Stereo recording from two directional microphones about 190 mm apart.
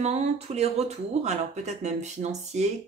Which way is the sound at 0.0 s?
35° right (ahead or behind).